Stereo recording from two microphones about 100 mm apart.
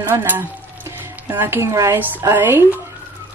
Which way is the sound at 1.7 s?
30° right (ahead or behind).